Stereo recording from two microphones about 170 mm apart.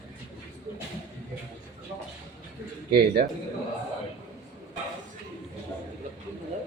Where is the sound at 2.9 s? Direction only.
70° right (ahead or behind).